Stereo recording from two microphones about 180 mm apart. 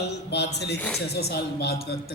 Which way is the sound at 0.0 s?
70° left (ahead or behind).